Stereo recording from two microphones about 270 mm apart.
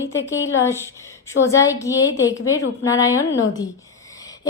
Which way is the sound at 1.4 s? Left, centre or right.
Left.